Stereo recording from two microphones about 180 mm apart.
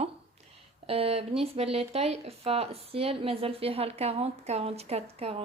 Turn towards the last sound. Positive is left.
turn(degrees=-35)  # may be behind; listen again after turning